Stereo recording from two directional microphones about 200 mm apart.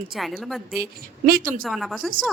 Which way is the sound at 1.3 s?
45° right (ahead or behind).